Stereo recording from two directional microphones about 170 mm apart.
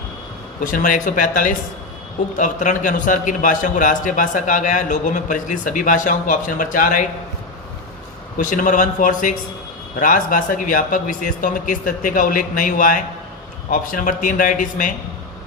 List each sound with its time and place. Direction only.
0.6 s a man's voice: 50° left (ahead or behind)
8.4 s a man's voice: 50° left (ahead or behind)